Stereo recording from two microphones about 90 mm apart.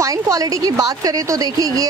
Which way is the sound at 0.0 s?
40° right (ahead or behind).